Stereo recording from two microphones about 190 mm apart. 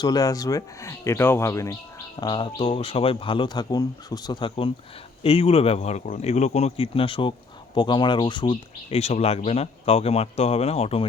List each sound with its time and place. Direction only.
0.0 s speech: 20° left (ahead or behind)